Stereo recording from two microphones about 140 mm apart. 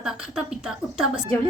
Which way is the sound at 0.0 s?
5° right (ahead or behind).